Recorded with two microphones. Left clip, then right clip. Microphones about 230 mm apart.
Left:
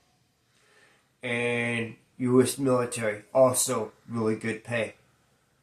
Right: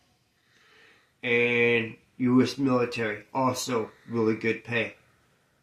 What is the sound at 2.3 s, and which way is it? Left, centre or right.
Speech, left.